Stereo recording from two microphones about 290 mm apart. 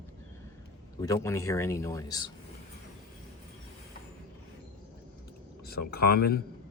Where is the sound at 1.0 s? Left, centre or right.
Centre.